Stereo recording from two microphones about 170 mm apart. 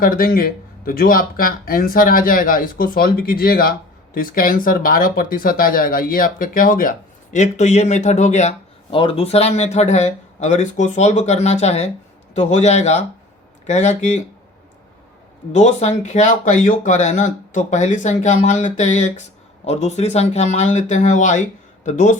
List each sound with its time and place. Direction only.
0.0 s speech: 60° left (ahead or behind)
7.3 s speech: 45° left (ahead or behind)
15.5 s speech: 40° left (ahead or behind)